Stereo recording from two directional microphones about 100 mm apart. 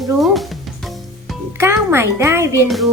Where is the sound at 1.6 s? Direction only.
25° right (ahead or behind).